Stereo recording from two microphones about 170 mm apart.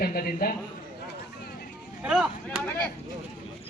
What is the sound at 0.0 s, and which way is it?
Speech, 60° left (ahead or behind).